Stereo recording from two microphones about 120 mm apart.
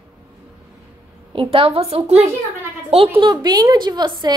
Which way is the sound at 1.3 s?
50° right (ahead or behind).